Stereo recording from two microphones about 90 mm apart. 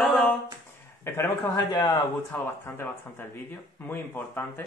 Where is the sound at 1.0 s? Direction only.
30° left (ahead or behind).